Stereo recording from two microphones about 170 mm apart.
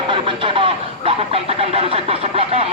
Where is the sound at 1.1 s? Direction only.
35° right (ahead or behind).